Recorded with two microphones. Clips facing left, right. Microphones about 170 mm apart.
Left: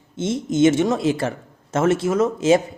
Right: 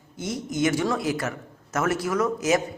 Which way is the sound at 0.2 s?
25° left (ahead or behind).